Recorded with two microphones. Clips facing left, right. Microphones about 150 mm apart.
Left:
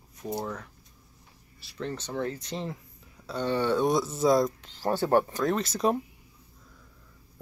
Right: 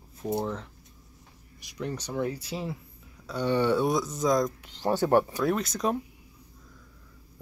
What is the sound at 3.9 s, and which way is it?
Speech, centre (ahead or behind).